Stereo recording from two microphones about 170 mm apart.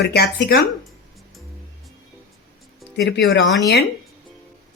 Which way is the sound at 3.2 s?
90° left.